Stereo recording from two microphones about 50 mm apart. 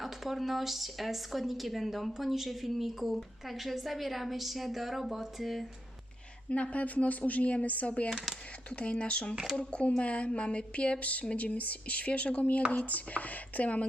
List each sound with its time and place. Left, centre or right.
0.0 s a woman's voice: centre
6.5 s speech: left
8.1 s a woman's voice: centre
8.7 s speech: left
9.3 s speech: centre
9.6 s speech: left